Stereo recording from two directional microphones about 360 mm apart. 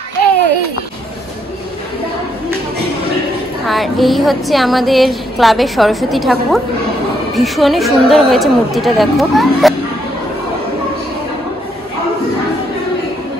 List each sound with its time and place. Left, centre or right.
3.6 s speech: centre